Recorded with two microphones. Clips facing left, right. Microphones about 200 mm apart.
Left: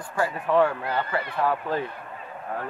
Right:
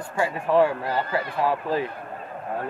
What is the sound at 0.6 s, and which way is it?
Speech, 30° right (ahead or behind).